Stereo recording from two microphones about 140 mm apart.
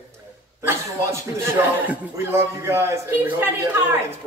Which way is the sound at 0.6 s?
15° right (ahead or behind).